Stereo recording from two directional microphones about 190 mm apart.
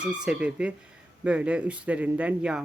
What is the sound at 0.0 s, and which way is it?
Speech, 5° right (ahead or behind).